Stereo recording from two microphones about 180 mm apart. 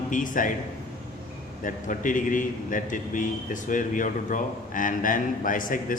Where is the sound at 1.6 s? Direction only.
45° left (ahead or behind).